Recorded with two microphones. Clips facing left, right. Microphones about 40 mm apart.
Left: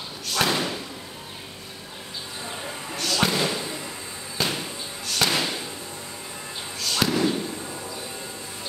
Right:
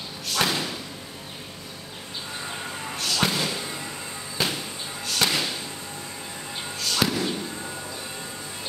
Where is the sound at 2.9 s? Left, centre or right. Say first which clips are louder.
Left 2 dB; centre.